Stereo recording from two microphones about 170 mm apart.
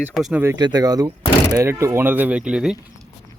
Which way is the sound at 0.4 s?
25° right (ahead or behind).